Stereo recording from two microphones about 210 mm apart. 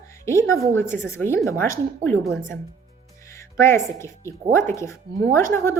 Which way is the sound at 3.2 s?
15° left (ahead or behind).